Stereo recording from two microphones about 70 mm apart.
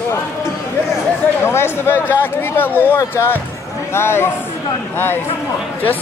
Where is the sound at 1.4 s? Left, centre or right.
Left.